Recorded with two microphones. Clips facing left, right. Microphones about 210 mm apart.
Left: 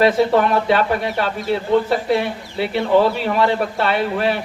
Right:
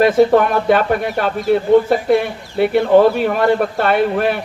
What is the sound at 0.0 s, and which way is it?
A man's voice, 50° right (ahead or behind).